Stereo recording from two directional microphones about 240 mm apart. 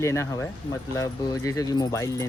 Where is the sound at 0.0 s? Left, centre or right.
Centre.